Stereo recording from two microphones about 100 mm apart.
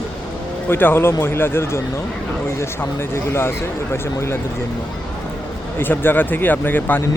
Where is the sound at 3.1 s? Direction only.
25° left (ahead or behind).